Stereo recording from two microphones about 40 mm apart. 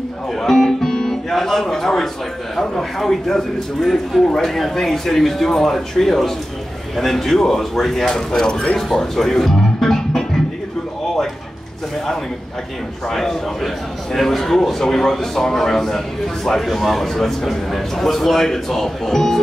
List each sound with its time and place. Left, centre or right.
0.4 s music: centre
3.0 s a man's voice: centre
8.7 s music: centre
13.1 s a man's voice: centre